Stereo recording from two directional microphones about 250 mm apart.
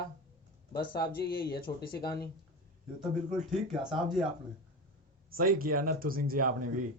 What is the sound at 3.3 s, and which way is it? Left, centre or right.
Speech, centre.